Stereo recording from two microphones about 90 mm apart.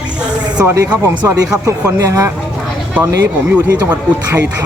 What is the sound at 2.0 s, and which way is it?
Speech, 40° right (ahead or behind).